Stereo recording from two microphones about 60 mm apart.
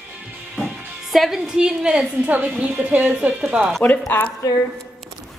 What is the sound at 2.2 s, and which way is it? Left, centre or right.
A woman's voice, right.